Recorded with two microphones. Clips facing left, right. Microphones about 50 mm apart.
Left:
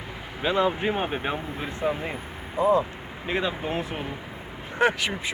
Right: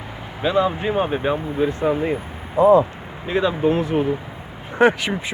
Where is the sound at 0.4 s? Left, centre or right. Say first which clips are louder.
Right 4 dB; left.